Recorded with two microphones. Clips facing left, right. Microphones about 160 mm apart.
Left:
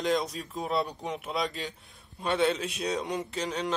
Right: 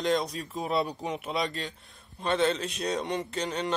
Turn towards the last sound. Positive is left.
turn(degrees=0)  # may be behind; listen again after turning